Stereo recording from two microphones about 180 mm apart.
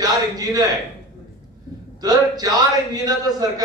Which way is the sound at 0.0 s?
20° right (ahead or behind).